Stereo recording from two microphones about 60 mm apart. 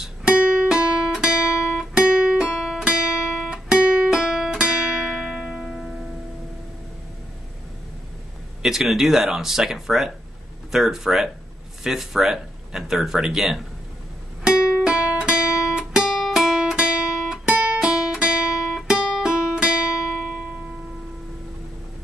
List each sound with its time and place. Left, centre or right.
0.4 s music: right
0.7 s guitar: centre
4.6 s music: right
8.6 s speech: centre
14.9 s guitar: centre